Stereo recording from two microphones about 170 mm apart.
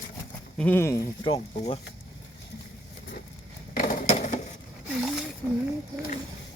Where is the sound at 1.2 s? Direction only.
35° left (ahead or behind).